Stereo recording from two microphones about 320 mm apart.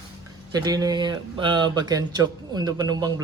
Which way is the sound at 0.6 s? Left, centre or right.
Centre.